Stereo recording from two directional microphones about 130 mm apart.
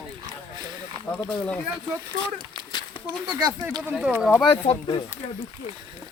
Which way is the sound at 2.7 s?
35° left (ahead or behind).